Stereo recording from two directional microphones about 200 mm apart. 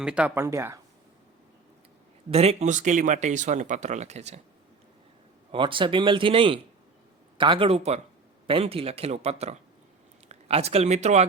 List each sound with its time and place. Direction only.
0.0 s speech: 5° right (ahead or behind)
2.3 s speech: 30° right (ahead or behind)
5.5 s speech: 25° right (ahead or behind)